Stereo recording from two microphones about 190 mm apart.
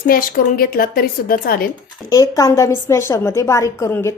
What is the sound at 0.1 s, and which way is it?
A woman's voice, 50° left (ahead or behind).